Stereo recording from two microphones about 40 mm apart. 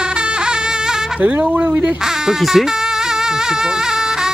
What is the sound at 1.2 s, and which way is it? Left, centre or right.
Speech, right.